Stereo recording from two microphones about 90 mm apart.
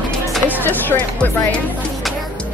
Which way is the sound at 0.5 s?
20° left (ahead or behind).